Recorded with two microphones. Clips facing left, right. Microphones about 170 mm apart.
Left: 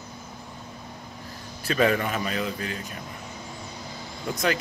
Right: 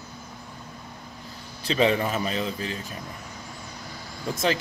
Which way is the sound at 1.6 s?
25° right (ahead or behind).